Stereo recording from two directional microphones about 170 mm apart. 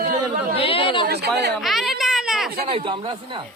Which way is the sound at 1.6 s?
Centre (ahead or behind).